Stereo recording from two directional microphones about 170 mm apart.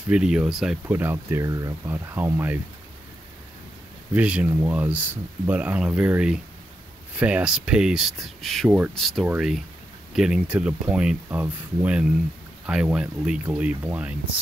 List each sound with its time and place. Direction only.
0.1 s speech: 5° right (ahead or behind)
4.1 s speech: 10° right (ahead or behind)